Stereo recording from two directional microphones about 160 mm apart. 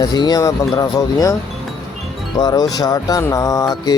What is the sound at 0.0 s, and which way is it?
Speech, 25° left (ahead or behind).